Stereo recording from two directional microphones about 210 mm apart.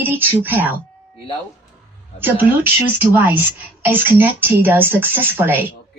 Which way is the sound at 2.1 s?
10° right (ahead or behind).